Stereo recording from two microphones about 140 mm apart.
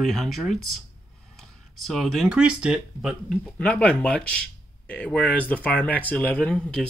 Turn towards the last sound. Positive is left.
turn(degrees=5)  # may be behind; listen again after turning